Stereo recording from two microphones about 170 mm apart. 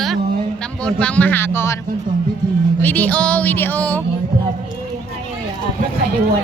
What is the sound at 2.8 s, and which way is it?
Speech, 10° left (ahead or behind).